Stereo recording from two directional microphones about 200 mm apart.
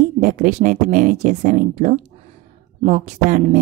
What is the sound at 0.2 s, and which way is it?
Speech, 40° right (ahead or behind).